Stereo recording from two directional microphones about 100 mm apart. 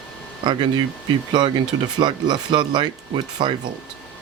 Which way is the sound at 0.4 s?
50° right (ahead or behind).